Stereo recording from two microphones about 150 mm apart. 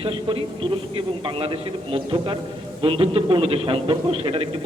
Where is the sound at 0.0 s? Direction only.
35° right (ahead or behind).